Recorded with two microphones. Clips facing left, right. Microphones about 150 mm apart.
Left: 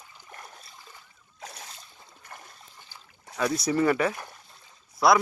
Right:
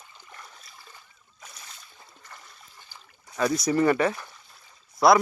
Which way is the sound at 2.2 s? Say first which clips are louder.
Left 3 dB; 50° left (ahead or behind).